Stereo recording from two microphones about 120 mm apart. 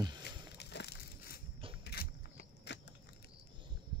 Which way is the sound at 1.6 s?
50° right (ahead or behind).